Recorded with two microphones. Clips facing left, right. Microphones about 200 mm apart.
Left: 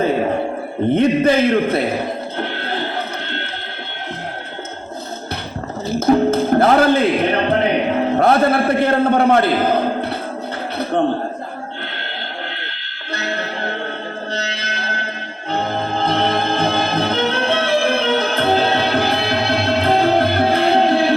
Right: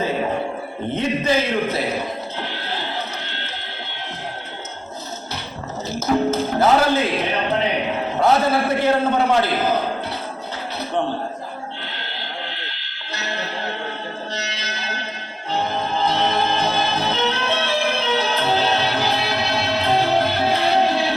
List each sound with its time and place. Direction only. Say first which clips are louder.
0.9 s a man's voice: left 6 dB; 55° left (ahead or behind)
2.4 s a sound: left 5 dB; 55° left (ahead or behind)
6.0 s music: left 5 dB; 55° left (ahead or behind)
8.1 s a man's voice: left 2 dB; 55° left (ahead or behind)
12.7 s music: left 5 dB; 55° left (ahead or behind)